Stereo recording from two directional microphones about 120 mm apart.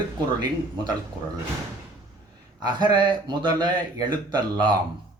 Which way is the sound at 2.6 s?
40° right (ahead or behind).